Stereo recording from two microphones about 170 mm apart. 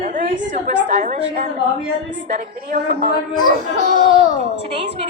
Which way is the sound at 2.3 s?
55° right (ahead or behind).